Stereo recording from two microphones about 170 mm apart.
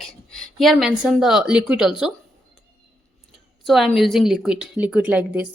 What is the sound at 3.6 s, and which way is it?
A woman's voice, centre (ahead or behind).